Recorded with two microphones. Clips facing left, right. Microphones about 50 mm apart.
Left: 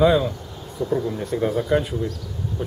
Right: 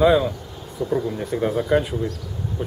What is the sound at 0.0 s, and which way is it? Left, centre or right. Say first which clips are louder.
Speech: right 1 dB; centre.